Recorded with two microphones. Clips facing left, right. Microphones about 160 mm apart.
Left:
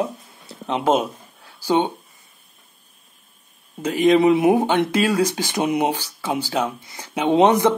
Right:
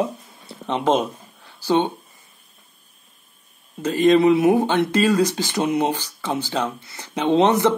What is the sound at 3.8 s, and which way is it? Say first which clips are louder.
Speech: even; 15° left (ahead or behind).